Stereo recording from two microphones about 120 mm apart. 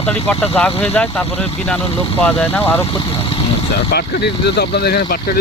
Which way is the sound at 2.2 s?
15° left (ahead or behind).